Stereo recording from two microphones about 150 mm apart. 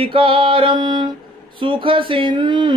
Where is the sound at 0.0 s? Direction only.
35° right (ahead or behind).